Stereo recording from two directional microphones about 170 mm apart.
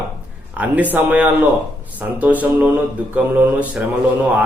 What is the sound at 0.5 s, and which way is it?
A man's voice, 10° right (ahead or behind).